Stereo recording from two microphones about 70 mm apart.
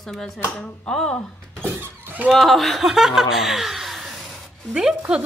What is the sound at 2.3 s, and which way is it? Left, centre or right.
Speech, centre.